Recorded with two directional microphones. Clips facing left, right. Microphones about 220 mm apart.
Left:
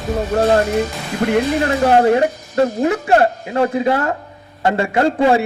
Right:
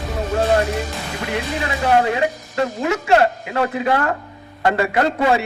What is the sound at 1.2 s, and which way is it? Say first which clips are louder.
A man's voice: left 9 dB; 50° left (ahead or behind).